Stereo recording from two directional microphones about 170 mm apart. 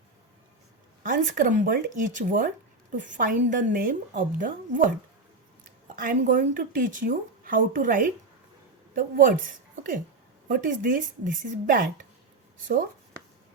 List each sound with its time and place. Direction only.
1.0 s a woman's voice: 50° right (ahead or behind)
6.0 s a woman's voice: 50° right (ahead or behind)